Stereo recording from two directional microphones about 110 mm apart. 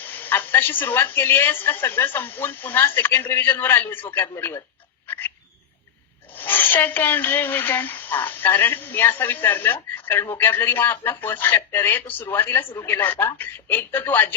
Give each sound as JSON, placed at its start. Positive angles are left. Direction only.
{"t": 0.0, "sound": "a woman's voice", "side_deg": 15}
{"t": 5.0, "sound": "frog", "side_deg": 20}
{"t": 6.3, "sound": "a woman's voice", "side_deg": 15}